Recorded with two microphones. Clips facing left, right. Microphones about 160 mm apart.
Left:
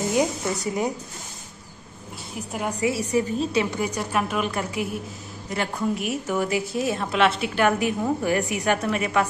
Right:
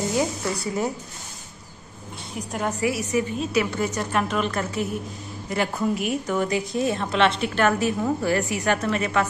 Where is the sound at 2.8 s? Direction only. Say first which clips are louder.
Left 2 dB; 30° left (ahead or behind).